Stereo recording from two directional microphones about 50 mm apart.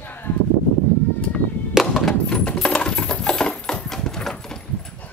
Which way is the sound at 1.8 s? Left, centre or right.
Centre.